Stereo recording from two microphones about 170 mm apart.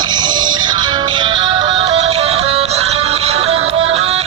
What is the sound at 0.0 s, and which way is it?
Music, 25° right (ahead or behind).